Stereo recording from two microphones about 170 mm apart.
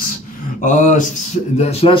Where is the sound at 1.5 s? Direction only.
35° left (ahead or behind).